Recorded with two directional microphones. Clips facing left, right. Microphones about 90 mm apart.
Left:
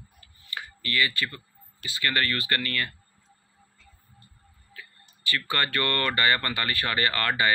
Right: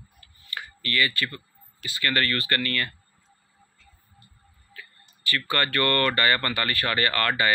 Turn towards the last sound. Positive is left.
turn(degrees=20)  # may be behind; listen again after turning